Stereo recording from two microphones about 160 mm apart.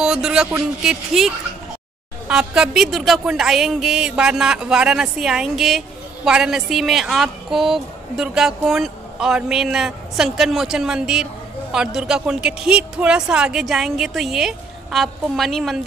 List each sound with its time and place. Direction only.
0.0 s speech: 5° right (ahead or behind)